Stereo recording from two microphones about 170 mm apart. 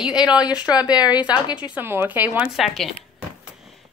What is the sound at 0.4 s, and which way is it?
Speech, 25° left (ahead or behind).